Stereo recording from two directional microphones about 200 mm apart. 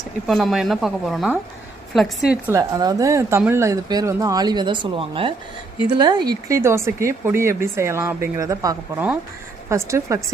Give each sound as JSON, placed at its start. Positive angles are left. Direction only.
{"t": 0.3, "sound": "speech", "side_deg": 0}
{"t": 2.6, "sound": "speech", "side_deg": -15}